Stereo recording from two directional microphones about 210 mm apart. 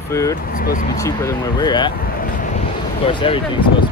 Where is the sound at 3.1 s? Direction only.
25° left (ahead or behind).